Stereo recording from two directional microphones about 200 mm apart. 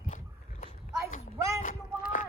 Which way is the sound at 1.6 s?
40° left (ahead or behind).